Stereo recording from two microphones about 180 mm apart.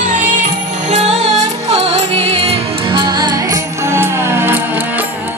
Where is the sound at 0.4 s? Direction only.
40° right (ahead or behind).